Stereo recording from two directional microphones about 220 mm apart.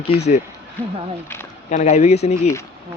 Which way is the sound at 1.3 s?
10° left (ahead or behind).